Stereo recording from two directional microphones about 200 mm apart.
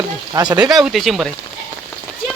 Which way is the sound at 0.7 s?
Centre (ahead or behind).